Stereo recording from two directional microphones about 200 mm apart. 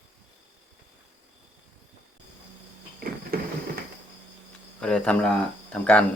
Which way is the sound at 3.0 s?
50° right (ahead or behind).